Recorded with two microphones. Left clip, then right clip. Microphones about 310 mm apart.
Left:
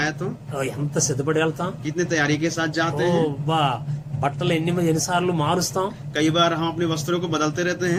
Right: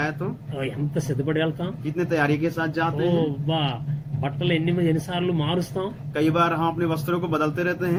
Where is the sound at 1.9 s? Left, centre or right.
Centre.